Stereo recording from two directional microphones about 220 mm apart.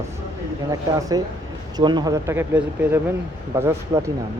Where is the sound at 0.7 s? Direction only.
15° right (ahead or behind).